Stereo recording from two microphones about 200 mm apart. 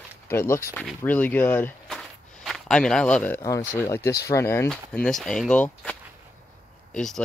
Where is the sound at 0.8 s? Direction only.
10° left (ahead or behind).